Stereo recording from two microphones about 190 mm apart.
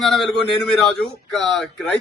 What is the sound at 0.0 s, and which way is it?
A man's voice, centre (ahead or behind).